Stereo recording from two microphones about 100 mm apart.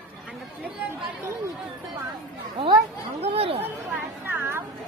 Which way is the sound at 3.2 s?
70° right (ahead or behind).